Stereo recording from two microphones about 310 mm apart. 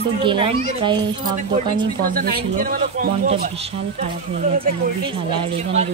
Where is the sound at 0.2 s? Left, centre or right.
Centre.